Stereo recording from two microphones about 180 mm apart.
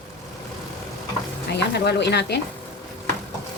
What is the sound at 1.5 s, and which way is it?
Speech, 70° left (ahead or behind).